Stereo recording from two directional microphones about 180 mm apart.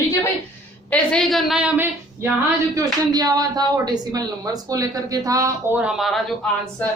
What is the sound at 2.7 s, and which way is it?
A woman's voice, 20° right (ahead or behind).